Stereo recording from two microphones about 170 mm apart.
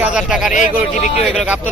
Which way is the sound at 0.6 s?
45° left (ahead or behind).